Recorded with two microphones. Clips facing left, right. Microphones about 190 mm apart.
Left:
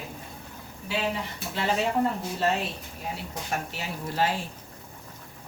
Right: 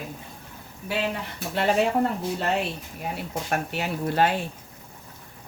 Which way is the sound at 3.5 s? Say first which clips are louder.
Right 5 dB; 60° right (ahead or behind).